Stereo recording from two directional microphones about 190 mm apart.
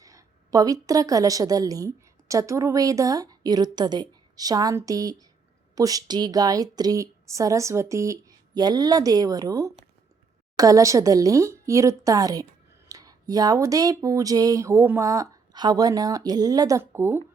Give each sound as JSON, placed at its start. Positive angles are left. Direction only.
{"t": 0.0, "sound": "a woman's voice", "side_deg": -15}